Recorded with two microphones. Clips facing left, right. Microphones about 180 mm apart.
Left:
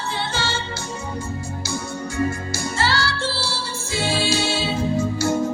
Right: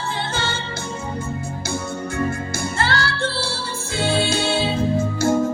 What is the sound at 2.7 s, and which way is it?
Music, 55° right (ahead or behind).